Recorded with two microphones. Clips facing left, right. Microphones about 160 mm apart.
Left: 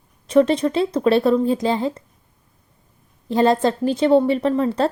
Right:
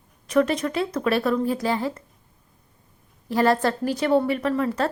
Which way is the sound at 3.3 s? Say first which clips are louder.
Left 4 dB; 20° left (ahead or behind).